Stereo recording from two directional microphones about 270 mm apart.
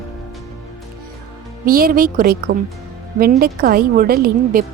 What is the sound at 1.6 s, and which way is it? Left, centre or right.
A woman's voice, right.